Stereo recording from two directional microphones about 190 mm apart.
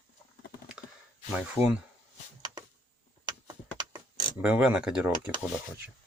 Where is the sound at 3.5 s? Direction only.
25° right (ahead or behind).